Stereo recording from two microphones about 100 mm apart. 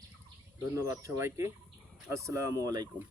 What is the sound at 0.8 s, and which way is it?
Speech, 30° right (ahead or behind).